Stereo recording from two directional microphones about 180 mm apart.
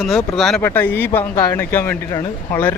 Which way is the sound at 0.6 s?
15° left (ahead or behind).